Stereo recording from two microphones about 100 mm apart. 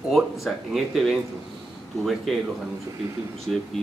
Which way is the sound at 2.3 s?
Centre (ahead or behind).